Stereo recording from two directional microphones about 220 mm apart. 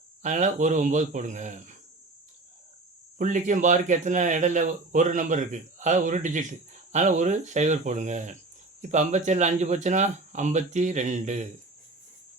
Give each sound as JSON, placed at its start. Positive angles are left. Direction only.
{"t": 0.2, "sound": "speech", "side_deg": -35}
{"t": 3.2, "sound": "speech", "side_deg": -35}